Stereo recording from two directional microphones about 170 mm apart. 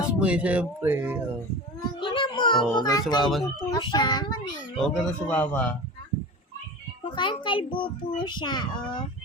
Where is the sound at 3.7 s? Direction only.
25° left (ahead or behind).